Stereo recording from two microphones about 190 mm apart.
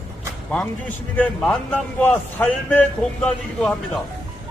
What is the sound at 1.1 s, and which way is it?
A man's voice, 5° left (ahead or behind).